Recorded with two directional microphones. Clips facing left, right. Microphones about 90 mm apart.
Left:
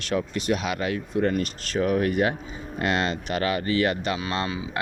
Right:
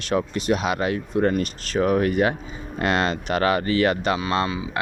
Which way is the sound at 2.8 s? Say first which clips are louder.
Right 3 dB; 45° right (ahead or behind).